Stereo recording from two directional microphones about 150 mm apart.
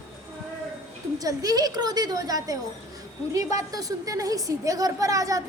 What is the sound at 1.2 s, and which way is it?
A woman's voice, 25° right (ahead or behind).